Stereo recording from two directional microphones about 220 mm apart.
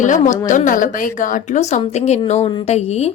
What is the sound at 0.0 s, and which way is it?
A woman's voice, 35° left (ahead or behind).